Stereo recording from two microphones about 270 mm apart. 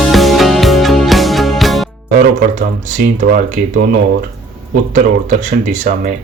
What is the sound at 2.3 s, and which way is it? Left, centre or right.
Speech, right.